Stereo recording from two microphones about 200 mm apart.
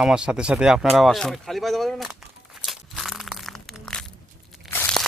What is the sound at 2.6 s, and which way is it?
Crushing, centre (ahead or behind).